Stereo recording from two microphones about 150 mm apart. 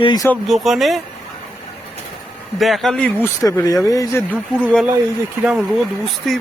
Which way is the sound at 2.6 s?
Centre (ahead or behind).